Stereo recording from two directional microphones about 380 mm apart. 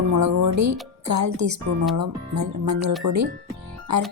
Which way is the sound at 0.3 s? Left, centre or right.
Right.